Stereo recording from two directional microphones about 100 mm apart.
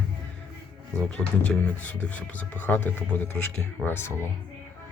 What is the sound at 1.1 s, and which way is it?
Speech, 10° left (ahead or behind).